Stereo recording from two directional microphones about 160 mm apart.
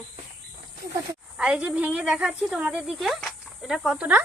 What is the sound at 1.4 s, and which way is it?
A woman's voice, 5° right (ahead or behind).